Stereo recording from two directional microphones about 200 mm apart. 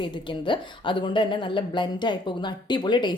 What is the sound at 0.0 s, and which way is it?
A woman's voice, 25° left (ahead or behind).